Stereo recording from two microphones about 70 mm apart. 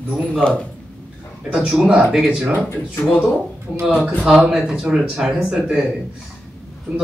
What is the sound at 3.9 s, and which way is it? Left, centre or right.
Speech, centre.